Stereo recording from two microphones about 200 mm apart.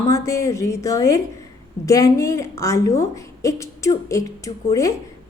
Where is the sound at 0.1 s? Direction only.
15° left (ahead or behind).